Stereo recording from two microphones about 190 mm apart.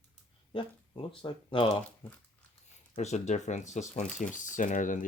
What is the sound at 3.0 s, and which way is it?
Speech, 35° left (ahead or behind).